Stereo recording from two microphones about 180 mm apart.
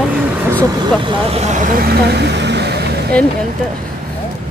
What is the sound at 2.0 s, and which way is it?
Vehicle, 65° right (ahead or behind).